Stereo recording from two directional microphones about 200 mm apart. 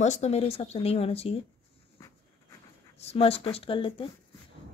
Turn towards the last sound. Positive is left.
turn(degrees=25)  # may be behind; listen again after turning